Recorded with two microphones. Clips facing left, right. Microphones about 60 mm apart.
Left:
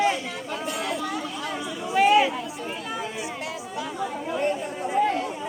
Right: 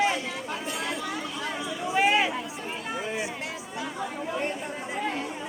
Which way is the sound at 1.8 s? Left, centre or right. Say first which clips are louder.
Left 4 dB; centre.